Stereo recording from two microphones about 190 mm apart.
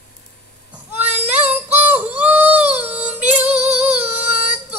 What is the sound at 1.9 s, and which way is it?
Female singing, 10° right (ahead or behind).